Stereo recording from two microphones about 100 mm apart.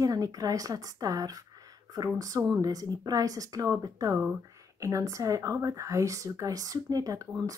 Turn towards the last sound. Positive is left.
turn(degrees=-35)  # may be behind; listen again after turning